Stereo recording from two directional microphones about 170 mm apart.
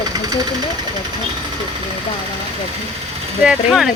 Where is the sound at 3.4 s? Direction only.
5° right (ahead or behind).